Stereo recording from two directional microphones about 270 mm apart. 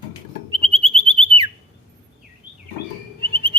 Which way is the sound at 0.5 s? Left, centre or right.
Centre.